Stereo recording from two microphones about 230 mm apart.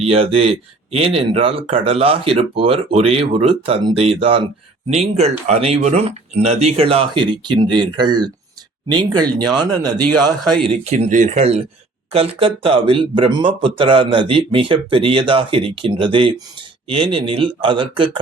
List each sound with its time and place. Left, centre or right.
0.0 s speech: right